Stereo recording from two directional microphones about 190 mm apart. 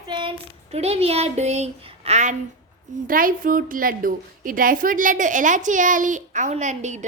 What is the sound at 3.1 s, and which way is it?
A woman's voice, 45° right (ahead or behind).